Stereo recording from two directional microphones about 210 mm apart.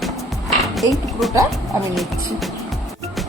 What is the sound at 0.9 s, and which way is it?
Speech, centre (ahead or behind).